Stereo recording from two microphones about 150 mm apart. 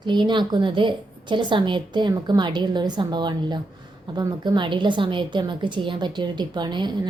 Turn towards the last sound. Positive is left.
turn(degrees=-30)  # may be behind; listen again after turning